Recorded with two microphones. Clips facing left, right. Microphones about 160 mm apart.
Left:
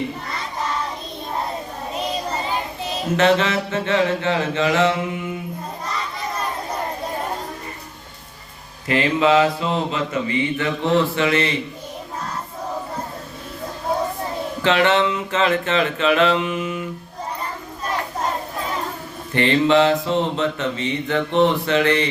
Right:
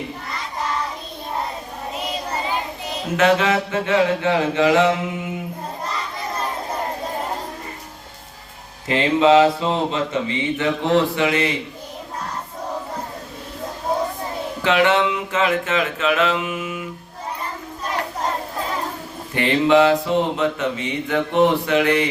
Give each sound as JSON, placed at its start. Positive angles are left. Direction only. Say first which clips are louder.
{"t": 3.2, "sound": "mantra", "louder": "right 1 dB", "side_deg": -10}
{"t": 8.9, "sound": "mantra", "louder": "right 2 dB", "side_deg": -25}
{"t": 14.6, "sound": "mantra", "louder": "even", "side_deg": -10}
{"t": 19.3, "sound": "mantra", "louder": "even", "side_deg": -10}